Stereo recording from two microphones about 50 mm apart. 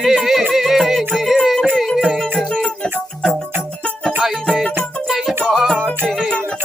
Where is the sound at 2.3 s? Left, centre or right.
Centre.